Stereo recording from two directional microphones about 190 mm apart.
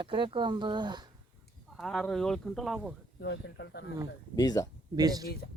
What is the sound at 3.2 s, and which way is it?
Speech, 70° left (ahead or behind).